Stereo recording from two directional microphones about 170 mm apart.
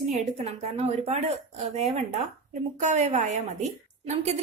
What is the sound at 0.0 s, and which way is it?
A woman's voice, 40° right (ahead or behind).